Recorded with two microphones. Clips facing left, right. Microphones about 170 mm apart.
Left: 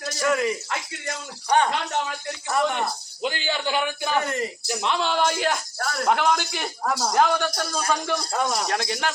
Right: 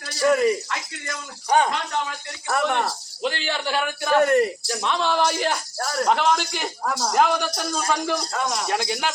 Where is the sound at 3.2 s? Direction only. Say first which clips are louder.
Right 1 dB; 15° left (ahead or behind).